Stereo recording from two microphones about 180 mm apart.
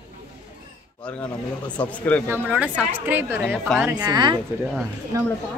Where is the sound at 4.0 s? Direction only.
25° right (ahead or behind).